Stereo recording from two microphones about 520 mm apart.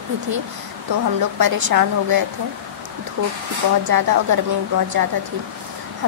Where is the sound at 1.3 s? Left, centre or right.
Right.